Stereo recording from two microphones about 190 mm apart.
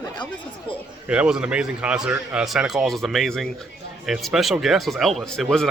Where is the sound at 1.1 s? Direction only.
5° right (ahead or behind).